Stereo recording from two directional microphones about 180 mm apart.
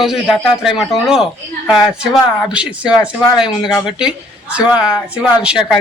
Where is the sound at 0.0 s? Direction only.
Centre (ahead or behind).